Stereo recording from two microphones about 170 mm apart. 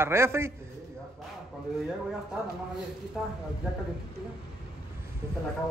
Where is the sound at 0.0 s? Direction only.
15° right (ahead or behind).